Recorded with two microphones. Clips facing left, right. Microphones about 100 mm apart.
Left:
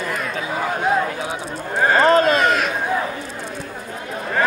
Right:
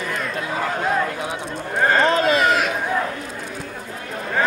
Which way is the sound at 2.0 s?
40° left (ahead or behind).